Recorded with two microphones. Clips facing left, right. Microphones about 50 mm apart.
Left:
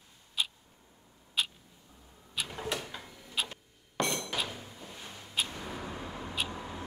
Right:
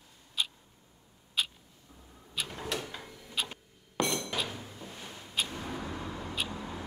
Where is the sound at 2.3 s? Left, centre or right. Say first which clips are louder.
Even; centre.